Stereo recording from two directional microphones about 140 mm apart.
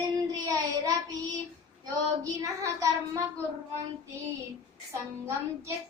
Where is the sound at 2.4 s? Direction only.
25° right (ahead or behind).